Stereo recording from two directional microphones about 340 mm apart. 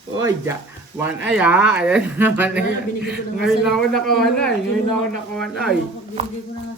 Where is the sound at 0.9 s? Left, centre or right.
Centre.